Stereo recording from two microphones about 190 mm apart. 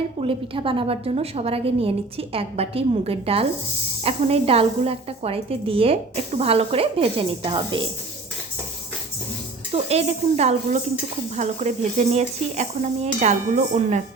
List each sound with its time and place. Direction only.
0.2 s a woman's voice: 30° right (ahead or behind)
9.7 s a woman's voice: 35° right (ahead or behind)